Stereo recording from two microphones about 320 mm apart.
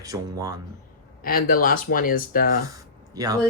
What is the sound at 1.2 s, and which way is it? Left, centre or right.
Speech, left.